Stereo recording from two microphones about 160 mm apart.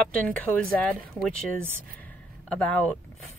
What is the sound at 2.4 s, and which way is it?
Speech, 10° left (ahead or behind).